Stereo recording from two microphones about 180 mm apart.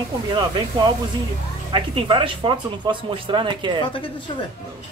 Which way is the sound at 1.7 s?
30° right (ahead or behind).